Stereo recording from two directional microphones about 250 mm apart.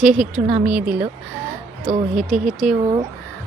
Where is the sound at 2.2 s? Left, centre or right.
Centre.